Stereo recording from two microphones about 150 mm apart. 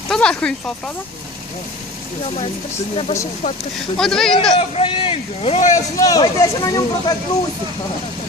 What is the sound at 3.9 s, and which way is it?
Speech, 5° left (ahead or behind).